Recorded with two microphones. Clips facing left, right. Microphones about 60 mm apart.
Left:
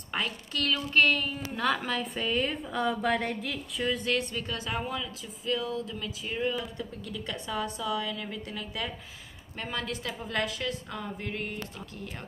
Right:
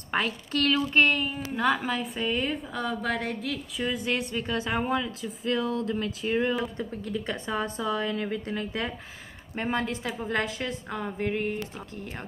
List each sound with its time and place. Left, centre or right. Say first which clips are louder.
0.1 s a woman's voice: right 5 dB; right; by 4.1 s centre
4.1 s a woman's voice: right 2 dB; right